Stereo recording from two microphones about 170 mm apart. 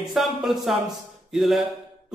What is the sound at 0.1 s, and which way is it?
A man's voice, centre (ahead or behind).